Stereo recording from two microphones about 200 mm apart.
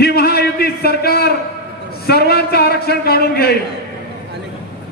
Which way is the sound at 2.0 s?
50° left (ahead or behind).